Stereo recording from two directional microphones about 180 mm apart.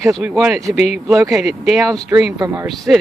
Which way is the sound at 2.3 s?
20° right (ahead or behind).